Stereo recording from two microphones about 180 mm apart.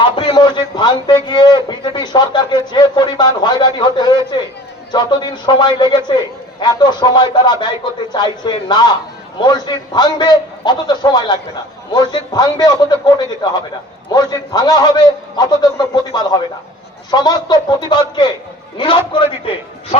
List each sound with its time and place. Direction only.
0.0 s a man's voice: 25° left (ahead or behind)